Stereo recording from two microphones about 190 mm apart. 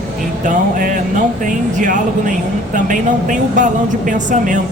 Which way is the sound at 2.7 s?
40° right (ahead or behind).